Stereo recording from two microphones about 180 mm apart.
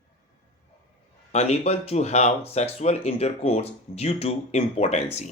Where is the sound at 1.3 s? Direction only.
35° left (ahead or behind).